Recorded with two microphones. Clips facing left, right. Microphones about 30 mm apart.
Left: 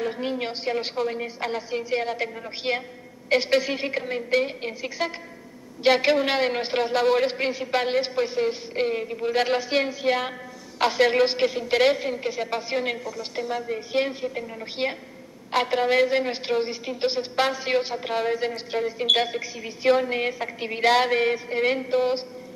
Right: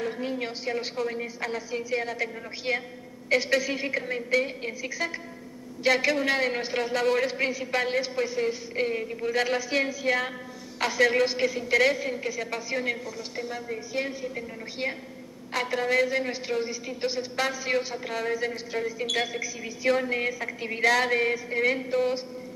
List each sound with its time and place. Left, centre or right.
0.1 s a woman's voice: left
13.4 s a woman's voice: centre
13.7 s a woman's voice: left